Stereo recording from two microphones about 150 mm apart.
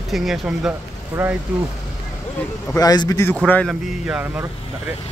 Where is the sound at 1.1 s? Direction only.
15° right (ahead or behind).